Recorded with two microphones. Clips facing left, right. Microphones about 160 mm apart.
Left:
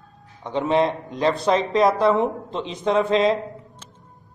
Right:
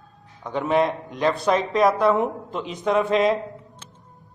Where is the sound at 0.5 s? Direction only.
30° left (ahead or behind).